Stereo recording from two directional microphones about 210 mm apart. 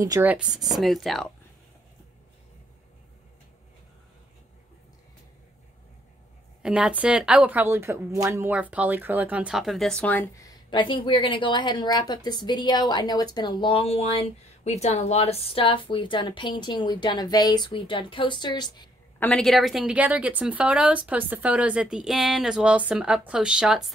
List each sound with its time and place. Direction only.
0.0 s a woman's voice: 10° right (ahead or behind)
6.6 s speech: 5° right (ahead or behind); by 18.9 s 20° left (ahead or behind)
19.1 s a woman's voice: 5° left (ahead or behind)